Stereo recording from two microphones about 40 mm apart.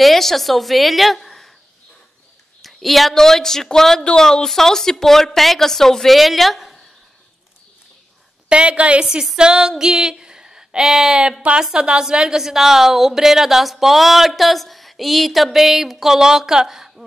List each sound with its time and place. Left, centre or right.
0.0 s a woman's voice: centre
2.6 s a woman's voice: centre
8.5 s a woman's voice: right
9.0 s a woman's voice: centre
9.4 s female singing: centre
11.7 s a woman's voice: right